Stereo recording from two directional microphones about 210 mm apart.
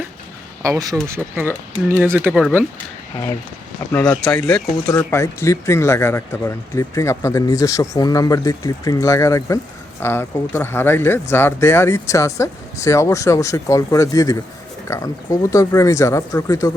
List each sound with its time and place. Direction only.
0.6 s speech: 15° right (ahead or behind)
3.9 s speech: 10° left (ahead or behind)